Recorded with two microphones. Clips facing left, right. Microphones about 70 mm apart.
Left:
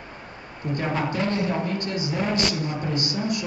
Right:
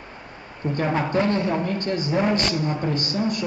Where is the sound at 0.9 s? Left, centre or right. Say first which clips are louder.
Right 4 dB; right.